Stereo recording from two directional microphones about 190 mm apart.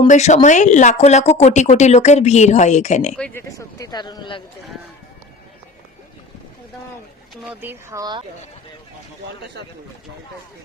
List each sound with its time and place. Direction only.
0.1 s speech: 40° left (ahead or behind)
3.2 s speech: 5° left (ahead or behind)
3.8 s speech: 20° left (ahead or behind)
7.4 s speech: 10° right (ahead or behind)